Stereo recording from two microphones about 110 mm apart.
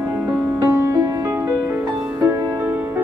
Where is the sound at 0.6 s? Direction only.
25° right (ahead or behind).